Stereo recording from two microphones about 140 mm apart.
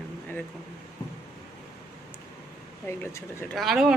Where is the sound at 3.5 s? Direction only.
Centre (ahead or behind).